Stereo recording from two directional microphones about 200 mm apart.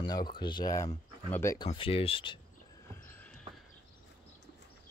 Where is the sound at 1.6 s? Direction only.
25° left (ahead or behind).